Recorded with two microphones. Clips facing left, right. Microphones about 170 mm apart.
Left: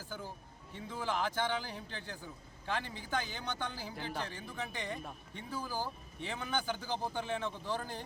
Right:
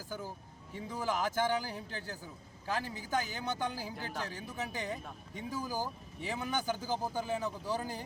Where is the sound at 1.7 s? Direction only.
40° right (ahead or behind).